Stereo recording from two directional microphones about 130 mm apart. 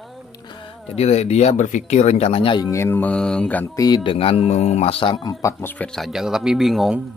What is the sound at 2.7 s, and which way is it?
Mantra, 20° left (ahead or behind).